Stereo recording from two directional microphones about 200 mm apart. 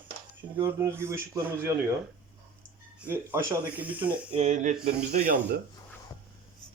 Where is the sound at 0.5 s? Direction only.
10° right (ahead or behind).